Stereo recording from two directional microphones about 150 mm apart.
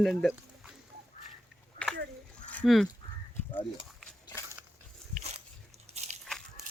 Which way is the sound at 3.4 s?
15° left (ahead or behind).